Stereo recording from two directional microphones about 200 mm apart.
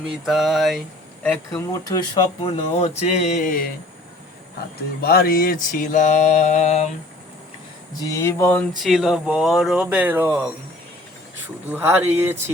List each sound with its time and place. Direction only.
0.3 s speech: centre (ahead or behind)
1.2 s speech: 10° left (ahead or behind); by 2.9 s 30° left (ahead or behind)
3.1 s mantra: 40° left (ahead or behind)
5.0 s mantra: 45° left (ahead or behind)
8.0 s speech: 15° left (ahead or behind)
8.8 s speech: 5° right (ahead or behind)
11.7 s speech: 10° right (ahead or behind)